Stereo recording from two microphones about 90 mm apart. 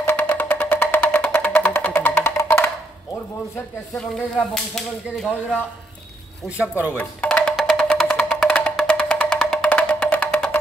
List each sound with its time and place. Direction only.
0.0 s music: 20° left (ahead or behind)
4.6 s speech: 5° left (ahead or behind)
6.5 s speech: 15° right (ahead or behind)
7.0 s music: 15° left (ahead or behind)